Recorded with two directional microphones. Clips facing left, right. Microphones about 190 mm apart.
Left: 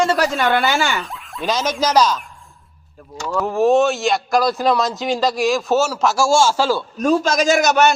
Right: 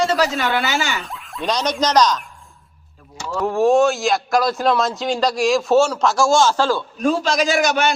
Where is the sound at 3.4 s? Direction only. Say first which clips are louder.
Even; centre (ahead or behind).